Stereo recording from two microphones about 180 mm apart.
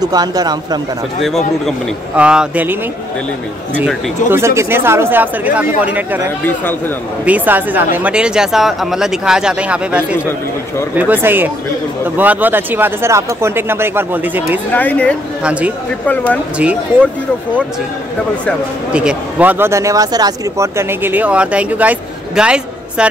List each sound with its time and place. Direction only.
0.0 s speech: 20° right (ahead or behind)
2.1 s speech: 5° right (ahead or behind)
4.3 s speech: 15° right (ahead or behind)
6.4 s speech: 10° left (ahead or behind)
7.2 s speech: 10° right (ahead or behind)
14.7 s speech: 10° left (ahead or behind)
15.4 s speech: 5° right (ahead or behind)
18.9 s speech: 5° right (ahead or behind)